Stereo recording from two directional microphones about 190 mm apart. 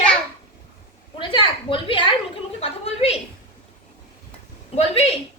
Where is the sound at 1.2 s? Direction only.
25° left (ahead or behind).